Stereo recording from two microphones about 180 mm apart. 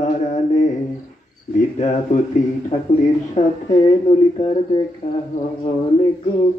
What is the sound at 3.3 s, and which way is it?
Speech, 40° left (ahead or behind).